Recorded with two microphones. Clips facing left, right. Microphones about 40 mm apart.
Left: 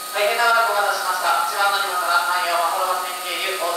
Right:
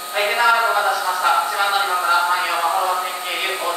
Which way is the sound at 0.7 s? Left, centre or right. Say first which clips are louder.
Right 1 dB; right.